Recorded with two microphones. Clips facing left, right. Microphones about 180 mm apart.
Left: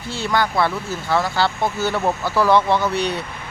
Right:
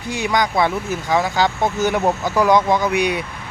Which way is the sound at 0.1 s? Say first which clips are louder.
Right 2 dB; 15° right (ahead or behind).